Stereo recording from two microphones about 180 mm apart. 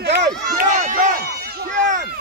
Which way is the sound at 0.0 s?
70° right (ahead or behind).